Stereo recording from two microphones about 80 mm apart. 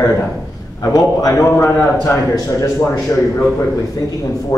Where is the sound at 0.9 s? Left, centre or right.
Left.